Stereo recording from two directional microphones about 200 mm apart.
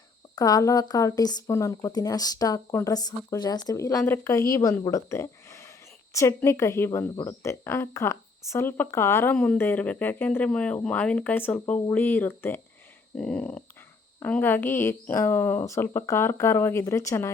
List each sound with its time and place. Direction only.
0.3 s a woman's voice: 20° left (ahead or behind)
13.1 s a sound: 5° left (ahead or behind)
14.2 s a woman's voice: 10° left (ahead or behind)